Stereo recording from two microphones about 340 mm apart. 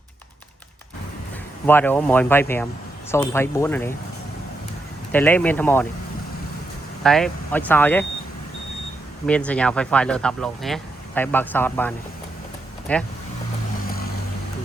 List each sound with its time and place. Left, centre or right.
1.6 s speech: centre
5.1 s speech: centre
7.0 s speech: centre
9.2 s speech: centre